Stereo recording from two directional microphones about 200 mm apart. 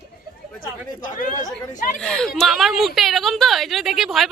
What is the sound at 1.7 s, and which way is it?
Speech, 40° left (ahead or behind).